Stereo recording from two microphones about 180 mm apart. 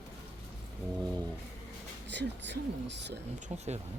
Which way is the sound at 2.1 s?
75° right (ahead or behind).